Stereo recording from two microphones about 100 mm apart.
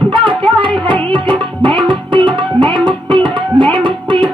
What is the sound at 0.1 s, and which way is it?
Music, 55° right (ahead or behind).